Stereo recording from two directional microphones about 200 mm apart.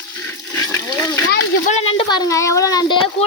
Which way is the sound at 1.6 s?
30° left (ahead or behind).